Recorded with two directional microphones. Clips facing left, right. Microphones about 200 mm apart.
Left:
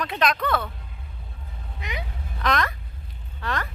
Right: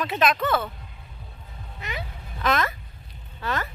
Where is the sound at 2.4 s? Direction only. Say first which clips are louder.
Right 1 dB; 5° right (ahead or behind).